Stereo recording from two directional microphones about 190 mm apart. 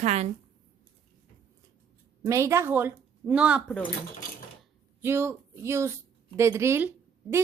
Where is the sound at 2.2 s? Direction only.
15° right (ahead or behind).